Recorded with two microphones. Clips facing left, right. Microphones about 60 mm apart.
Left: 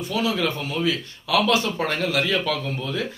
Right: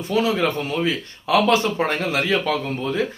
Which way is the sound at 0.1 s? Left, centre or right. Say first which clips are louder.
Right 4 dB; right.